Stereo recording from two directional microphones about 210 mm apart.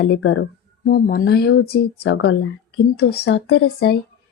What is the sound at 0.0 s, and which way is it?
Speech, 60° left (ahead or behind).